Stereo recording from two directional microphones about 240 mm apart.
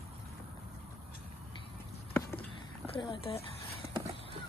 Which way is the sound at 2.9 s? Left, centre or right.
Centre.